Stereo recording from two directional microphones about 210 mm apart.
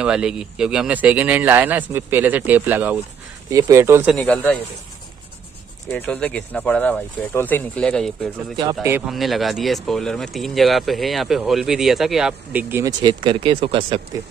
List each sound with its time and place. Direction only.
0.0 s speech: 5° right (ahead or behind)
4.1 s speech: 5° left (ahead or behind)
5.9 s speech: 5° left (ahead or behind); by 12.9 s 10° right (ahead or behind)
13.0 s speech: 25° right (ahead or behind)